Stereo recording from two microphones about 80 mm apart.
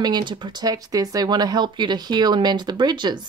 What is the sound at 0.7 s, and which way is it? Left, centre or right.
Speech, right.